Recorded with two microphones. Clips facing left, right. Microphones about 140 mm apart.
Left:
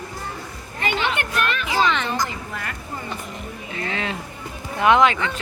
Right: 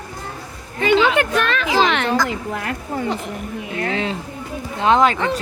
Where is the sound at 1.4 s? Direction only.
90° right.